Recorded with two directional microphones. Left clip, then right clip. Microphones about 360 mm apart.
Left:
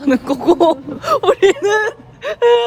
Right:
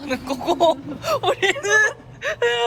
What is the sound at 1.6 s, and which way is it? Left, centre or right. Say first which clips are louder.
Speech: left 2 dB; centre.